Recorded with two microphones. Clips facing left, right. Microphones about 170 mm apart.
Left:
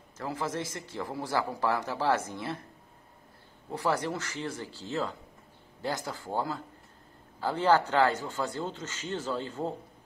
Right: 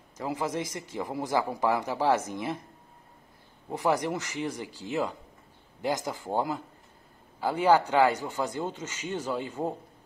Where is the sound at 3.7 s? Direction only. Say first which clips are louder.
Right 3 dB; 15° right (ahead or behind).